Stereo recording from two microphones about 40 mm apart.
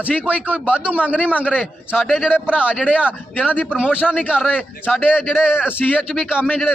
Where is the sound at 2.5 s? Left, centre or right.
Right.